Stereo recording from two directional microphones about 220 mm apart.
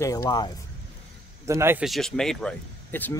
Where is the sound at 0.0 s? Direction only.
15° left (ahead or behind).